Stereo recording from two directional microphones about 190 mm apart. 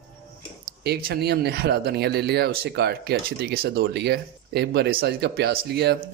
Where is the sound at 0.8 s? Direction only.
55° right (ahead or behind).